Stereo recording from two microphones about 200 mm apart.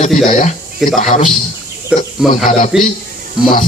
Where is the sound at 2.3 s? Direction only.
40° left (ahead or behind).